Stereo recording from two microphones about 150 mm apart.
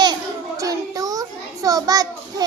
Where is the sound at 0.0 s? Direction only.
25° right (ahead or behind).